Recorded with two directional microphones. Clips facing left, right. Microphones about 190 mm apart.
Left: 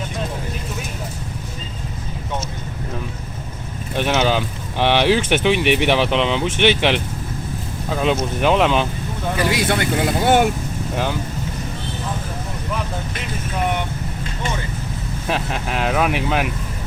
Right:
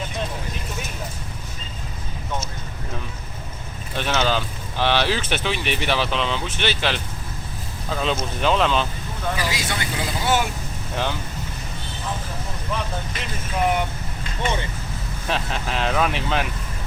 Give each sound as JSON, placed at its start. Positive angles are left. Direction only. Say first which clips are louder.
{"t": 3.9, "sound": "speech", "louder": "left 4 dB", "side_deg": 15}
{"t": 9.4, "sound": "speech", "louder": "left 8 dB", "side_deg": 55}
{"t": 15.3, "sound": "speech", "louder": "left 2 dB", "side_deg": 5}